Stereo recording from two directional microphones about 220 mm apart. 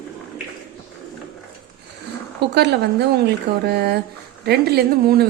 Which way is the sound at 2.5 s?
50° right (ahead or behind).